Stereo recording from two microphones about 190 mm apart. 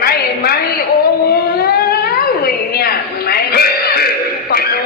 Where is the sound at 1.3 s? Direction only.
55° left (ahead or behind).